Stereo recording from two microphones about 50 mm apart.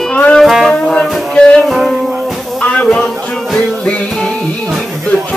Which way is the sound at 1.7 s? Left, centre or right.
Centre.